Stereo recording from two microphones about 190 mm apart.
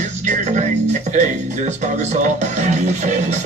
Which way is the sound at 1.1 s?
40° right (ahead or behind).